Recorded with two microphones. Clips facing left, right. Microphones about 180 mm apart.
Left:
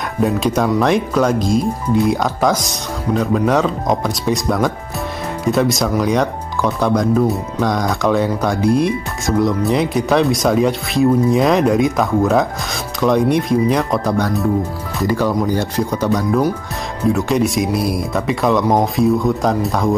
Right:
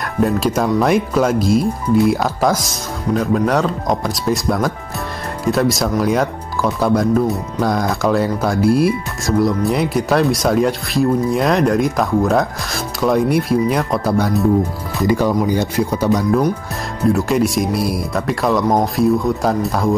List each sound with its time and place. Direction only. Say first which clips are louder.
0.2 s speech: even; centre (ahead or behind)
15.0 s speech: right 1 dB; 15° right (ahead or behind)
17.1 s speech: even; centre (ahead or behind)